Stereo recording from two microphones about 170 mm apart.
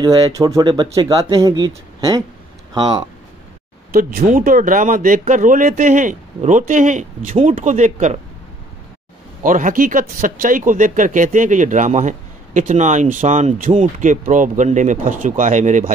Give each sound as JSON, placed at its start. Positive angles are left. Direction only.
{"t": 0.0, "sound": "speech", "side_deg": -20}
{"t": 3.9, "sound": "speech", "side_deg": -60}
{"t": 9.4, "sound": "speech", "side_deg": -50}